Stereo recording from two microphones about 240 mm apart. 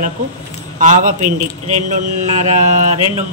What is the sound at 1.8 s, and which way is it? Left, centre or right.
Mantra, right.